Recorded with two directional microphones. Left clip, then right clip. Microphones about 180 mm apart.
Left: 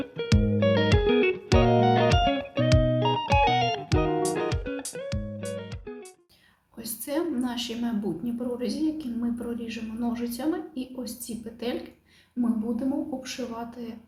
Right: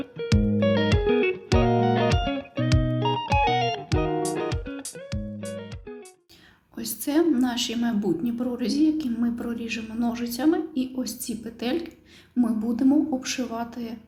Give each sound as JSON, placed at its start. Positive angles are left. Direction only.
{"t": 0.0, "sound": "music", "side_deg": 0}
{"t": 6.7, "sound": "a woman's voice", "side_deg": -40}
{"t": 13.2, "sound": "a man's voice", "side_deg": -45}